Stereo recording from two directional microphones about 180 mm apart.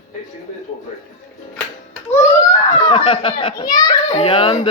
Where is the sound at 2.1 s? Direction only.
20° left (ahead or behind).